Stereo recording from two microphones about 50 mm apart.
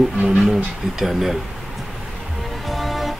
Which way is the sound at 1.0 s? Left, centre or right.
Centre.